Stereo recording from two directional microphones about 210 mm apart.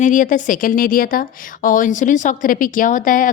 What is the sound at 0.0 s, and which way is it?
A woman's voice, 40° left (ahead or behind).